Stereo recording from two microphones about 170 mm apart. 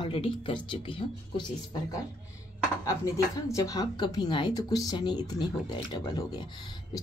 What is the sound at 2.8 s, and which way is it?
Speech, 20° left (ahead or behind).